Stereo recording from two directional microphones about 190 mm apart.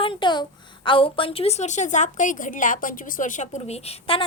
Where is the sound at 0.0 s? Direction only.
25° left (ahead or behind).